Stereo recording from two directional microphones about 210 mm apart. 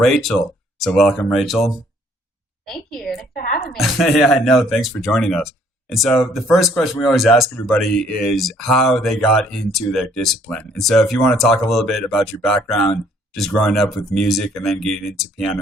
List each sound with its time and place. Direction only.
0.0 s speech: centre (ahead or behind)
3.3 s a woman's voice: 45° left (ahead or behind)
3.7 s speech: centre (ahead or behind)